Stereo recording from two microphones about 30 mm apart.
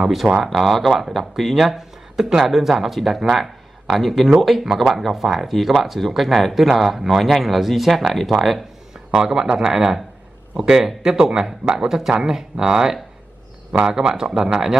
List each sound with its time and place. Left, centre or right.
0.4 s speech: centre
9.1 s a man's voice: right
13.7 s speech: right
13.9 s speech: right